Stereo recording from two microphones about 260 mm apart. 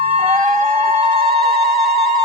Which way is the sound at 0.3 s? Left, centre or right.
Right.